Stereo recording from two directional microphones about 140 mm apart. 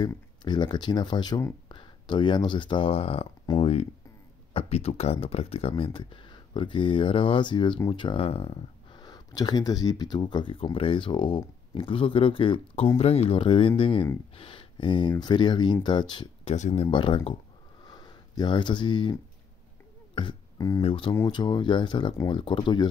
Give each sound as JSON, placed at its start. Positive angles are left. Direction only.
{"t": 0.0, "sound": "speech", "side_deg": 30}
{"t": 3.5, "sound": "speech", "side_deg": 30}
{"t": 4.6, "sound": "speech", "side_deg": 45}
{"t": 13.4, "sound": "speech", "side_deg": 35}
{"t": 16.4, "sound": "speech", "side_deg": 50}
{"t": 16.8, "sound": "speech", "side_deg": 35}
{"t": 17.8, "sound": "a sound", "side_deg": 30}
{"t": 20.2, "sound": "music", "side_deg": 30}
{"t": 20.8, "sound": "speech", "side_deg": 40}